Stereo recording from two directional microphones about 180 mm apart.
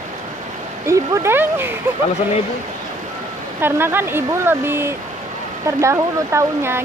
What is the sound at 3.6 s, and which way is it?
Speech, 10° right (ahead or behind).